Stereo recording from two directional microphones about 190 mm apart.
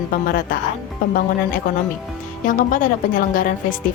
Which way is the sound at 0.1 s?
50° left (ahead or behind).